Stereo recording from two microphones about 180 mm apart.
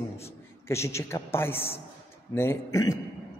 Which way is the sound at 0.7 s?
15° left (ahead or behind).